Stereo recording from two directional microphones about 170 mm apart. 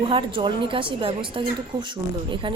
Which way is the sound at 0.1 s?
30° right (ahead or behind).